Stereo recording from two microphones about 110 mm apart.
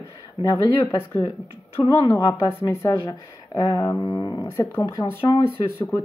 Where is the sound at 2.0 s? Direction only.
35° left (ahead or behind).